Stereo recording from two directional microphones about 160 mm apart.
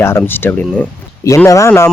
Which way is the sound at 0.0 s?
15° left (ahead or behind).